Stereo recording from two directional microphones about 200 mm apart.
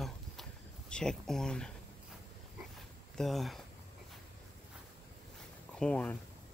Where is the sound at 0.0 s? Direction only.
5° left (ahead or behind).